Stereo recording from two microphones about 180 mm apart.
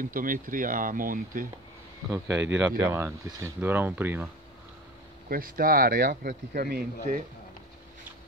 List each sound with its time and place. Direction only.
0.0 s speech: 50° right (ahead or behind)
2.2 s speech: 90° right
2.8 s speech: 15° right (ahead or behind)
5.3 s speech: 55° right (ahead or behind)